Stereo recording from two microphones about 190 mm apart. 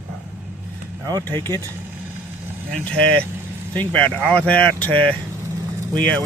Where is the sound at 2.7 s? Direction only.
5° left (ahead or behind).